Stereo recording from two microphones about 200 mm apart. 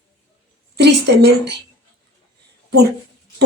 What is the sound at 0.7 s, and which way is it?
Speech, 55° right (ahead or behind).